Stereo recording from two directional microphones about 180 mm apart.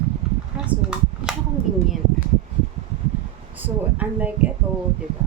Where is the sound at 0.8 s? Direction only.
5° right (ahead or behind).